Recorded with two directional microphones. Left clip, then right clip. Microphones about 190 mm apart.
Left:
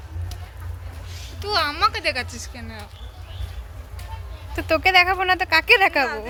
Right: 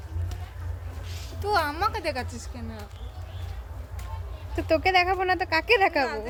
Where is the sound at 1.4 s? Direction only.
50° right (ahead or behind); by 2.5 s 30° right (ahead or behind).